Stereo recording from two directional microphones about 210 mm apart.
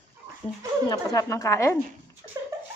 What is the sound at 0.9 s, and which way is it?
Speech, 15° left (ahead or behind).